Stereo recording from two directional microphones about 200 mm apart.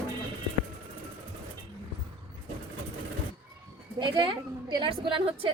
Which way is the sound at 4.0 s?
25° right (ahead or behind).